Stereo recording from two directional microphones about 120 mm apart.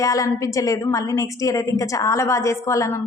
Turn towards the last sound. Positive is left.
turn(degrees=25)  # may be behind; listen again after turning